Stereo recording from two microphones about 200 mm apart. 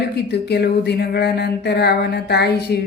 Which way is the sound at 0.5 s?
55° left (ahead or behind).